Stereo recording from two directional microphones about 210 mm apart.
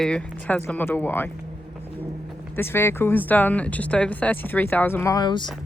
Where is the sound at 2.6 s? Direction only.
10° left (ahead or behind).